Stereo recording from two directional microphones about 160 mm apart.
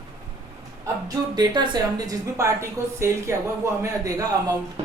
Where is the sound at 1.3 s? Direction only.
30° right (ahead or behind).